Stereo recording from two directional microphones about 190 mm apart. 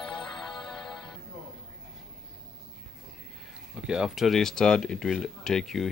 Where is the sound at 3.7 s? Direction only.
5° right (ahead or behind).